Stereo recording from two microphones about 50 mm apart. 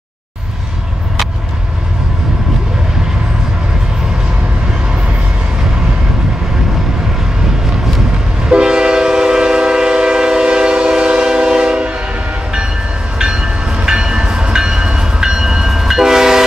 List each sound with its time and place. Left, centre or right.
8.5 s train: centre
13.2 s train: centre